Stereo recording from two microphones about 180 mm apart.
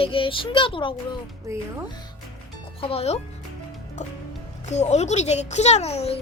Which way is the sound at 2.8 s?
30° left (ahead or behind).